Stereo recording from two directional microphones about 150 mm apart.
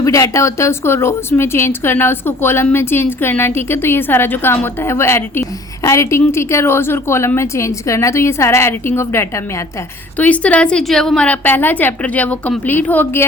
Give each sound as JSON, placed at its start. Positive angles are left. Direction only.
{"t": 0.0, "sound": "a woman's voice", "side_deg": 20}